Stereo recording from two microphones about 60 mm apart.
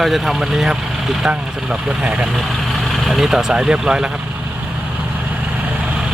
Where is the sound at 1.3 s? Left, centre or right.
Right.